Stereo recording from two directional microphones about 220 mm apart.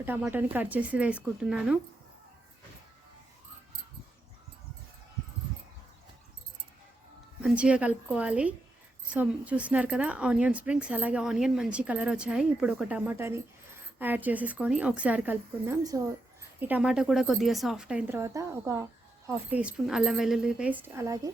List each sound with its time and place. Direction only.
0.0 s a woman's voice: 10° right (ahead or behind)
7.4 s a woman's voice: 5° right (ahead or behind)